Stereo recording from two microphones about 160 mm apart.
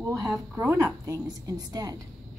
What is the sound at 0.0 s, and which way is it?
A woman's voice, 20° right (ahead or behind).